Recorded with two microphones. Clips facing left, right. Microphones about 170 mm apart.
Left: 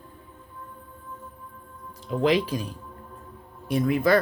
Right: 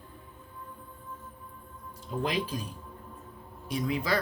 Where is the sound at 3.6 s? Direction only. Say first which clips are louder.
Left 8 dB; 55° left (ahead or behind).